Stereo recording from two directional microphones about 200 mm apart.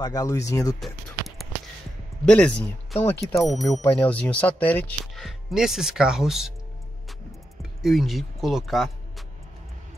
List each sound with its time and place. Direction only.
0.0 s speech: 20° left (ahead or behind)
0.7 s a sound: centre (ahead or behind)
2.2 s speech: 5° left (ahead or behind)
3.3 s speech: centre (ahead or behind)
7.8 s speech: centre (ahead or behind)